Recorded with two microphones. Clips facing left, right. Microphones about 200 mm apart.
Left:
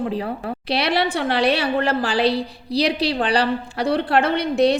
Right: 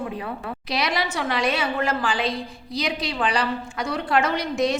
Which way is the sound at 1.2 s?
30° left (ahead or behind).